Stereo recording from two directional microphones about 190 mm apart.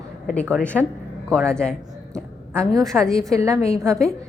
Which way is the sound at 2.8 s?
5° left (ahead or behind).